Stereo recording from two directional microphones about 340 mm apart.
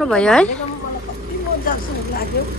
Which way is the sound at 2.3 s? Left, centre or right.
Left.